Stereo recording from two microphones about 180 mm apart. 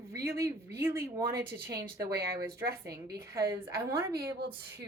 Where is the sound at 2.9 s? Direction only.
60° right (ahead or behind).